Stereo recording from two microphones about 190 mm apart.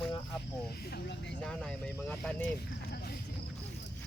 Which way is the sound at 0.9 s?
60° left (ahead or behind).